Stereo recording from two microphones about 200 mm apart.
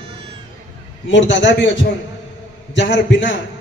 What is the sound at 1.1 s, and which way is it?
Speech, 65° left (ahead or behind).